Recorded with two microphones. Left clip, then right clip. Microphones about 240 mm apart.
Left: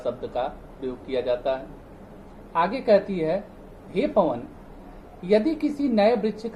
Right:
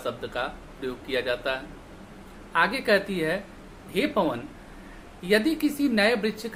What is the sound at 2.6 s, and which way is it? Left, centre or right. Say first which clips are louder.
Speech: left 2 dB; centre.